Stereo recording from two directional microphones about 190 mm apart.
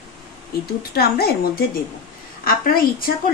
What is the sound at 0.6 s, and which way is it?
Speech, 55° left (ahead or behind).